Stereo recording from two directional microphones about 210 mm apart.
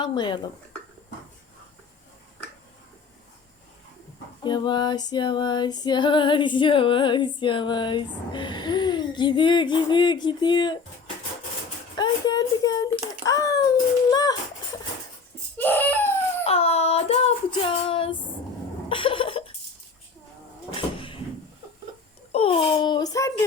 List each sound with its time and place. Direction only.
0.0 s female singing: 20° left (ahead or behind)
4.4 s female singing: 20° left (ahead or behind)
11.9 s a sound: 20° left (ahead or behind)
14.1 s music: 20° left (ahead or behind)
15.5 s crying: 10° left (ahead or behind)
16.5 s child singing: 30° left (ahead or behind)
18.9 s cough: 25° left (ahead or behind)
22.3 s a child's voice: 25° left (ahead or behind)